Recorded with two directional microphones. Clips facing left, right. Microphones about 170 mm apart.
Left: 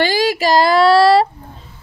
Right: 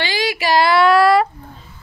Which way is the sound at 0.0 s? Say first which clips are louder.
Left 5 dB; 45° left (ahead or behind).